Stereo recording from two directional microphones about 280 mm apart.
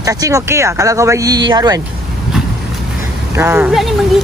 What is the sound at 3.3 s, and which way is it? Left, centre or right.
Speech, centre.